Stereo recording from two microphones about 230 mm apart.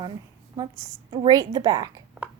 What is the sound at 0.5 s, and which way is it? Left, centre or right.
Speech, centre.